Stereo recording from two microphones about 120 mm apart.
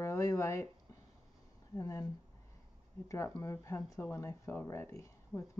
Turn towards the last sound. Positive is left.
turn(degrees=25)  # may be behind; listen again after turning